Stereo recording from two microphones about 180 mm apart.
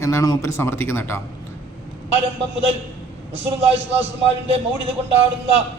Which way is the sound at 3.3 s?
35° right (ahead or behind).